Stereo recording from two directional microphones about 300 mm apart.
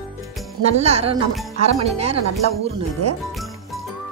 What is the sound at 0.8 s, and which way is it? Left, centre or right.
A woman's voice, right.